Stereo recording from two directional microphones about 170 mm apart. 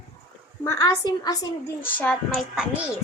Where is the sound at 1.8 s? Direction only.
10° left (ahead or behind).